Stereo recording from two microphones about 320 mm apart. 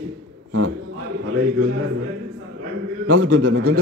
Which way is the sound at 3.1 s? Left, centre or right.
Right.